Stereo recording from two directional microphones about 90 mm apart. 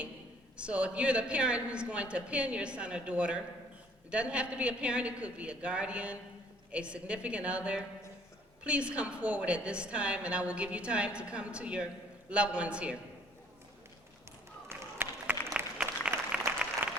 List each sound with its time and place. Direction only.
0.5 s a woman's voice: 10° right (ahead or behind)
14.7 s a sound: 25° right (ahead or behind)
16.5 s applause: 20° right (ahead or behind)